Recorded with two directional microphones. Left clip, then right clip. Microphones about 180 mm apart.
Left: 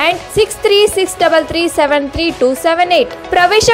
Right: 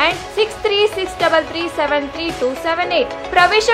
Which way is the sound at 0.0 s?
35° left (ahead or behind).